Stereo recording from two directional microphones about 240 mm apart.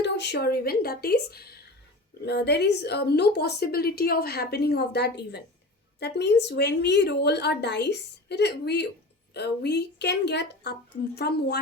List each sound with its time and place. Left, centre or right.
0.0 s a woman's voice: left